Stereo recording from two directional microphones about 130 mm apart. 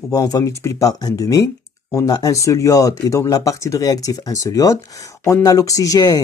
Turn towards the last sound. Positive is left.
turn(degrees=30)  # may be behind; listen again after turning